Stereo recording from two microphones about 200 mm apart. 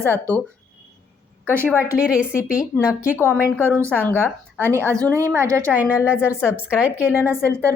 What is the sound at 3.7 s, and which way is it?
A woman's voice, 15° right (ahead or behind).